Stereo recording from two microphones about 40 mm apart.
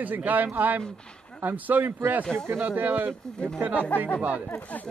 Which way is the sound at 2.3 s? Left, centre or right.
Right.